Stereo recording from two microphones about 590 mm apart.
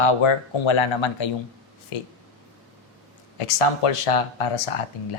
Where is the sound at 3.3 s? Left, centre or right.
Left.